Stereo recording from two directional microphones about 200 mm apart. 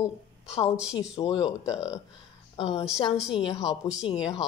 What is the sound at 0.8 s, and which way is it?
Speech, 5° right (ahead or behind).